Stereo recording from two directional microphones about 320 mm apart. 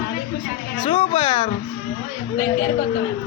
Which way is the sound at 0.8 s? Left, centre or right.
Centre.